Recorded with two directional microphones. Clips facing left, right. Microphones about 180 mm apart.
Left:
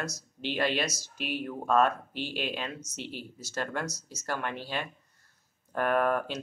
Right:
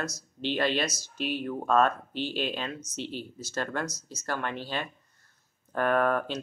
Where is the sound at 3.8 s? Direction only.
35° left (ahead or behind).